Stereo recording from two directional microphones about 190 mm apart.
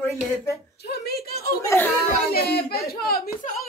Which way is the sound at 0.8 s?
55° left (ahead or behind).